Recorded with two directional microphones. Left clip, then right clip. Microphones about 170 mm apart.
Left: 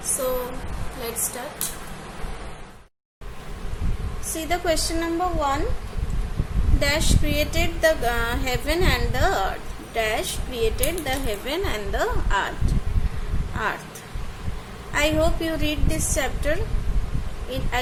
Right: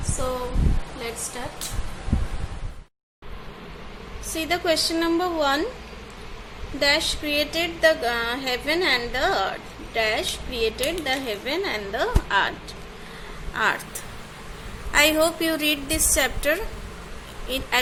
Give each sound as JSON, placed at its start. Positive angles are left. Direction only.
{"t": 4.4, "sound": "speech", "side_deg": 0}
{"t": 4.9, "sound": "speech", "side_deg": -20}
{"t": 6.7, "sound": "speech", "side_deg": 0}
{"t": 13.5, "sound": "speech", "side_deg": 0}
{"t": 14.9, "sound": "speech", "side_deg": 0}